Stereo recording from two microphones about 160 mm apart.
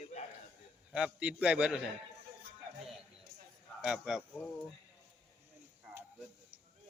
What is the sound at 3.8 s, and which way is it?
Speech, 5° right (ahead or behind).